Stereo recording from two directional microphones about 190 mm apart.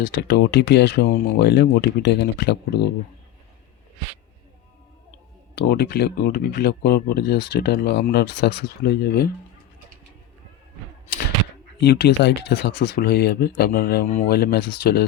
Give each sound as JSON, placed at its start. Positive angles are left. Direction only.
{"t": 0.0, "sound": "speech", "side_deg": 45}
{"t": 0.3, "sound": "speech", "side_deg": 65}
{"t": 5.5, "sound": "speech", "side_deg": 55}
{"t": 11.8, "sound": "speech", "side_deg": 60}